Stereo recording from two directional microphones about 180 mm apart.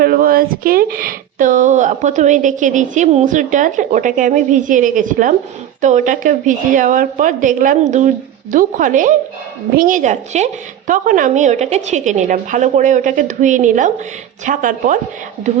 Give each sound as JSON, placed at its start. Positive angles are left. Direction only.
{"t": 0.0, "sound": "speech", "side_deg": -50}